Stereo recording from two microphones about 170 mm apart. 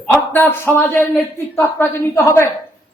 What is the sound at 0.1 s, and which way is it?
A man's voice, 10° left (ahead or behind).